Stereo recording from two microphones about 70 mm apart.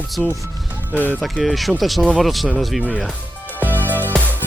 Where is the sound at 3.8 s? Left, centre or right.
Right.